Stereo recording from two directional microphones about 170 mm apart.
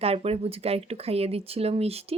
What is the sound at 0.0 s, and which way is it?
Speech, 35° right (ahead or behind).